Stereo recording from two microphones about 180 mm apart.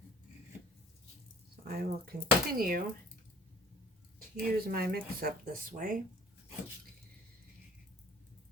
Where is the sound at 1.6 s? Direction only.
55° right (ahead or behind).